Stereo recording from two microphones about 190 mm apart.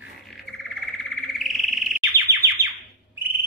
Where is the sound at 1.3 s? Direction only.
Centre (ahead or behind).